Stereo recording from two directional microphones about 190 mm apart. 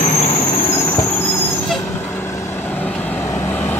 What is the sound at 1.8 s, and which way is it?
Vehicle, 15° left (ahead or behind).